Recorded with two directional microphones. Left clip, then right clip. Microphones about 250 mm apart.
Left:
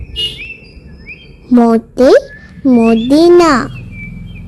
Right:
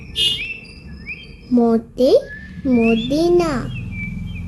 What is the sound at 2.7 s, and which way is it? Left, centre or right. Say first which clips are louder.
Speech: left 7 dB; left.